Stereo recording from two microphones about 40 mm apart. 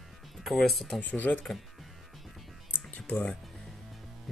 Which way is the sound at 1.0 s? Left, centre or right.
Left.